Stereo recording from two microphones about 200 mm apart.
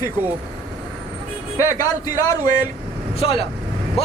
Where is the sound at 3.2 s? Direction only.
30° left (ahead or behind).